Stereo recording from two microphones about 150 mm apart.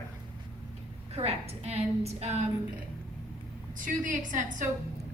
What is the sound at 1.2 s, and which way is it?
A woman's voice, 40° right (ahead or behind).